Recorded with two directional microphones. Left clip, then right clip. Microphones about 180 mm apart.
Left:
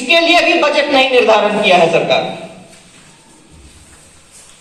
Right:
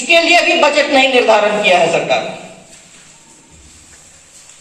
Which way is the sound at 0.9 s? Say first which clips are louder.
Left 1 dB; 45° right (ahead or behind).